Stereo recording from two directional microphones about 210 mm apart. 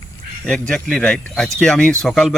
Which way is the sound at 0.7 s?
5° left (ahead or behind).